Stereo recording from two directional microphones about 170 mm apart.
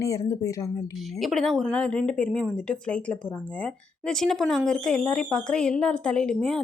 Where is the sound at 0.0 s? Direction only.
20° left (ahead or behind).